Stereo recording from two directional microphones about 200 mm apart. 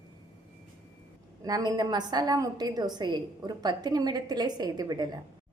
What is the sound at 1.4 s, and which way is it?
A woman's voice, 20° right (ahead or behind).